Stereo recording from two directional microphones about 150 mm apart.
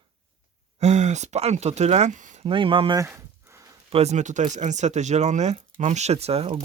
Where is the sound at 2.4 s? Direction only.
35° right (ahead or behind).